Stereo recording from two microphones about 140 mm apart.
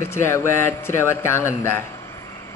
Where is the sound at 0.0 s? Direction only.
20° left (ahead or behind).